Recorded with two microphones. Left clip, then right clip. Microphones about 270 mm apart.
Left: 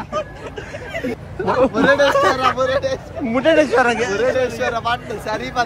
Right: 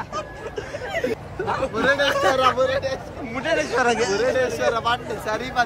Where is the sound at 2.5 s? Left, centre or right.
Centre.